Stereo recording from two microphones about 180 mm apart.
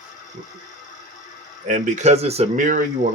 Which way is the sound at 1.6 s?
45° right (ahead or behind).